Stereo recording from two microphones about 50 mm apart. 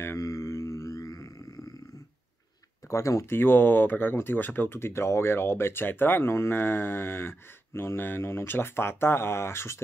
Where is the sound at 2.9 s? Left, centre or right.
Left.